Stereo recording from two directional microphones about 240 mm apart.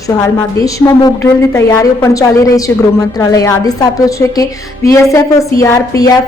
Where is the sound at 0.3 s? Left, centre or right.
Centre.